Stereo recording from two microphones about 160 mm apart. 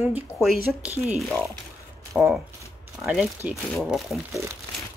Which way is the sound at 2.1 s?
10° right (ahead or behind).